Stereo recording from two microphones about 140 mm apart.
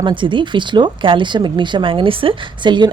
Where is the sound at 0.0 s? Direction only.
35° right (ahead or behind).